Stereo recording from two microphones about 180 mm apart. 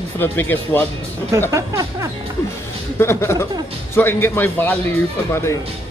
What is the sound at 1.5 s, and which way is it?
Music, 15° right (ahead or behind).